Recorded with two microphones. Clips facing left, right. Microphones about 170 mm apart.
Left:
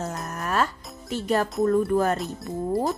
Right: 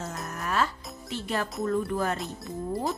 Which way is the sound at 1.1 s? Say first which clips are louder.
Left 7 dB; 45° left (ahead or behind).